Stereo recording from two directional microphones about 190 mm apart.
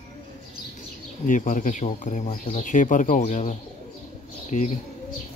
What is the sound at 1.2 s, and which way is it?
Speech, 40° left (ahead or behind).